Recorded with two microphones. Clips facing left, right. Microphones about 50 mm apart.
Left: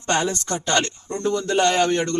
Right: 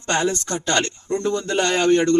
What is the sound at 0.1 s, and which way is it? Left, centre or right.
Speech, centre.